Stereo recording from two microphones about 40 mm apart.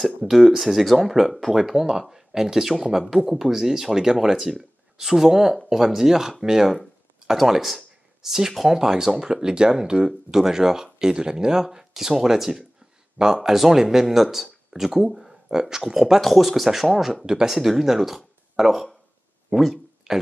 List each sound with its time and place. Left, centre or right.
0.3 s speech: centre
19.5 s speech: right
20.1 s speech: centre